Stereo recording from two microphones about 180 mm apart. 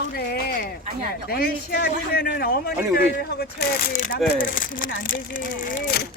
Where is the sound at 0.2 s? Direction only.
60° left (ahead or behind).